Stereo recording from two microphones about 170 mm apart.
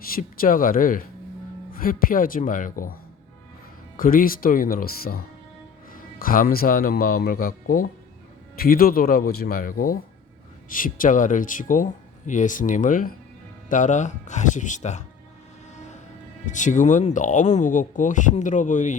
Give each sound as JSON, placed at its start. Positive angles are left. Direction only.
{"t": 0.1, "sound": "a man's voice", "side_deg": 55}
{"t": 3.9, "sound": "a man's voice", "side_deg": 55}
{"t": 15.7, "sound": "vehicle", "side_deg": 45}
{"t": 16.5, "sound": "speech", "side_deg": 45}